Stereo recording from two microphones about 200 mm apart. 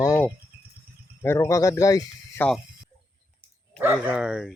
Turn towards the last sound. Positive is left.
turn(degrees=-5)  # may be behind; listen again after turning